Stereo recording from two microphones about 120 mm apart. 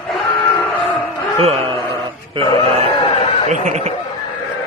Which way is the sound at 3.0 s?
55° left (ahead or behind).